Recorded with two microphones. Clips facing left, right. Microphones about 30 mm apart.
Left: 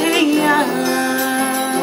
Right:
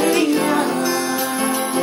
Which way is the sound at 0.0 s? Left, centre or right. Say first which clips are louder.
Left 2 dB; left.